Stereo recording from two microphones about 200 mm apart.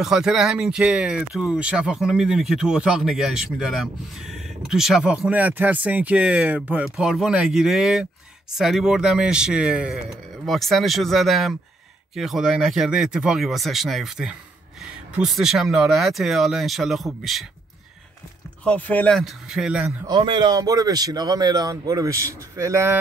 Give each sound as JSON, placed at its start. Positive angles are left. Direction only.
{"t": 0.0, "sound": "speech", "side_deg": 0}
{"t": 18.6, "sound": "speech", "side_deg": 5}
{"t": 20.1, "sound": "a man's voice", "side_deg": -25}